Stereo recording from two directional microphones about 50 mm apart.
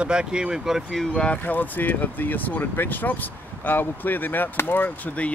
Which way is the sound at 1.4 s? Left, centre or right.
Left.